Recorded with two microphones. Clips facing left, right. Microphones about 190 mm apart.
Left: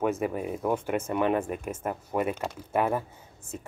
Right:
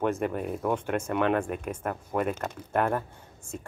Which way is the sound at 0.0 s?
5° left (ahead or behind).